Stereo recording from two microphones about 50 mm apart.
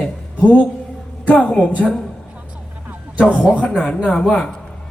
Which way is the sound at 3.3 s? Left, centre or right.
Right.